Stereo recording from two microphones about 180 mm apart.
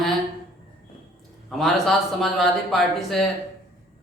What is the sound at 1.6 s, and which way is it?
Speech, centre (ahead or behind).